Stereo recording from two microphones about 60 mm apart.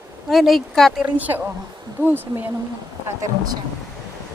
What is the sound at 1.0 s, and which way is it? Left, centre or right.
A woman's voice, right.